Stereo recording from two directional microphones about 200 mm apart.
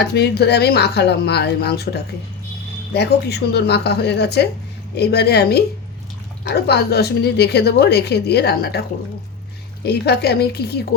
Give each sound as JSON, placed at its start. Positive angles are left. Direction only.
{"t": 0.0, "sound": "a woman's voice", "side_deg": 55}
{"t": 9.8, "sound": "a woman's voice", "side_deg": 55}